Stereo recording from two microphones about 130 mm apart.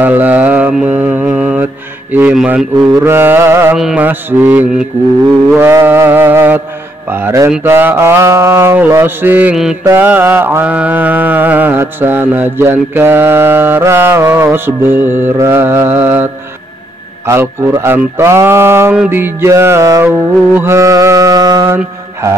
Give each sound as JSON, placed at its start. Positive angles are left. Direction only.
{"t": 0.0, "sound": "mantra", "side_deg": -15}
{"t": 3.7, "sound": "mantra", "side_deg": -5}
{"t": 17.3, "sound": "mantra", "side_deg": -20}